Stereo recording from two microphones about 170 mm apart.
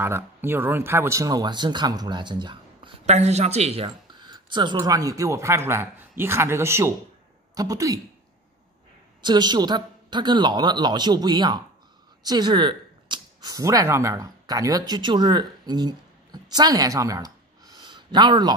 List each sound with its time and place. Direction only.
0.0 s speech: 15° right (ahead or behind)
9.2 s speech: 25° right (ahead or behind)